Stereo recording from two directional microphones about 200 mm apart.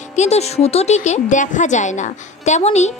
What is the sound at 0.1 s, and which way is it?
A woman's voice, 35° left (ahead or behind).